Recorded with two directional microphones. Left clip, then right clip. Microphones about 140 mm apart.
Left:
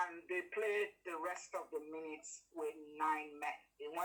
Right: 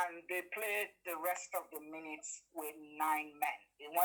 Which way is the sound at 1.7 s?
35° right (ahead or behind).